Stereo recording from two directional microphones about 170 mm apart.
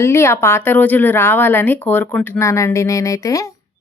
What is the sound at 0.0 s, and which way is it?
Speech, 15° left (ahead or behind).